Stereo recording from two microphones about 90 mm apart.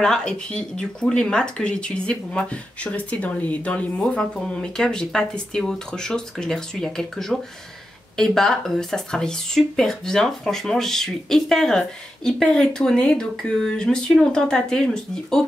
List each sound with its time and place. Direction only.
0.0 s speech: 5° left (ahead or behind)